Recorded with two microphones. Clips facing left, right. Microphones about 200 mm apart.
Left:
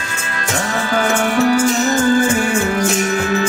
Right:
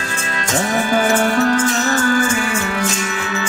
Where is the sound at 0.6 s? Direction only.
20° right (ahead or behind); by 2.2 s 20° left (ahead or behind).